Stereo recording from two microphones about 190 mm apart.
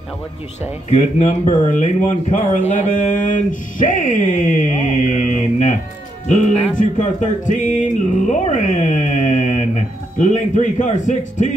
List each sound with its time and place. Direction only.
0.8 s speech: 35° left (ahead or behind)